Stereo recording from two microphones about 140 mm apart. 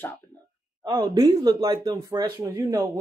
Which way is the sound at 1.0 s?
30° right (ahead or behind).